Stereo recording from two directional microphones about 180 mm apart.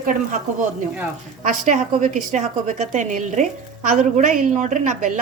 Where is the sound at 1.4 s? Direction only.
45° right (ahead or behind).